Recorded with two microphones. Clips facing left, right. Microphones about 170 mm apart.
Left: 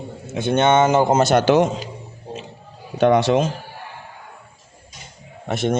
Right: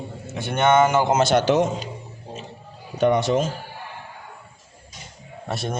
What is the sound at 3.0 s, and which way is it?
Speech, 80° left.